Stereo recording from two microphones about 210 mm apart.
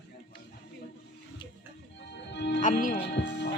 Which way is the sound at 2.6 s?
40° left (ahead or behind).